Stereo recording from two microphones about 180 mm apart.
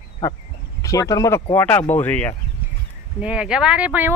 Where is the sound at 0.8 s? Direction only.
20° left (ahead or behind).